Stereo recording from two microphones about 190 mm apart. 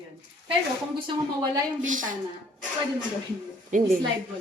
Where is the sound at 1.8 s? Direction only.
45° right (ahead or behind).